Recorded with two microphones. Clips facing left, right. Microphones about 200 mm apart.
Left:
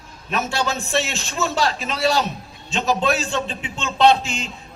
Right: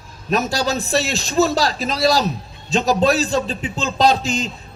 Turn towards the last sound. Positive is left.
turn(degrees=-35)  # may be behind; listen again after turning